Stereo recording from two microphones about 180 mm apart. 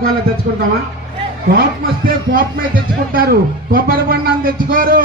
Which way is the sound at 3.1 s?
55° right (ahead or behind).